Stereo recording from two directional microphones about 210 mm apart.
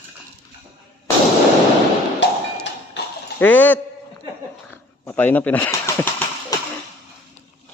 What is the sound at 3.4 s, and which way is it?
Speech, 10° left (ahead or behind).